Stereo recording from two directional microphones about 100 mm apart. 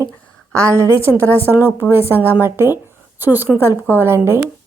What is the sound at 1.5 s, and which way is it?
A woman's voice, 20° right (ahead or behind).